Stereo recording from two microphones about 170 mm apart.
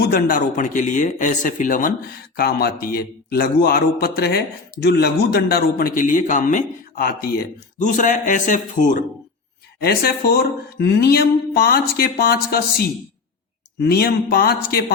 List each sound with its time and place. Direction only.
0.1 s speech: 55° left (ahead or behind)
2.3 s a man's voice: 65° left (ahead or behind); by 9.0 s 45° left (ahead or behind)
9.8 s a man's voice: 65° left (ahead or behind)